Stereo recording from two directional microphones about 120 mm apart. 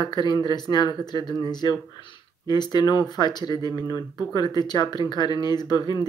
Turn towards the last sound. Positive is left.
turn(degrees=35)  # may be behind; listen again after turning